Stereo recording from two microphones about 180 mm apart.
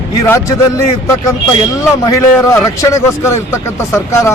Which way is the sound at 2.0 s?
20° left (ahead or behind).